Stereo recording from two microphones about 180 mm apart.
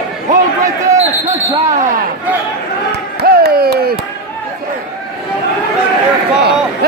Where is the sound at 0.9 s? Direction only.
40° right (ahead or behind).